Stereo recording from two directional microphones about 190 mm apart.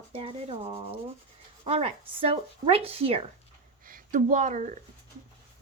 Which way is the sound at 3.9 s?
45° right (ahead or behind).